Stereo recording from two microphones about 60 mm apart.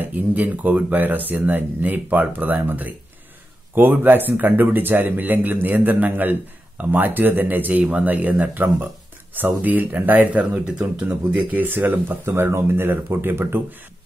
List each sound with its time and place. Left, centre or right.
0.0 s speech: right
3.9 s speech: right
12.3 s speech: right